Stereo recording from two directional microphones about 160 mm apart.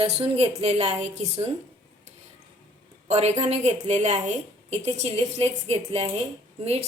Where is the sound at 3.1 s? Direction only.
45° right (ahead or behind).